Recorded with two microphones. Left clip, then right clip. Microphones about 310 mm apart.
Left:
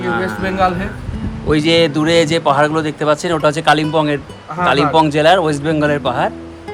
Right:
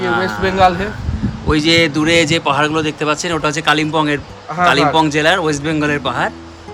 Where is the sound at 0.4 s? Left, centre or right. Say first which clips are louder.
Right 4 dB; right.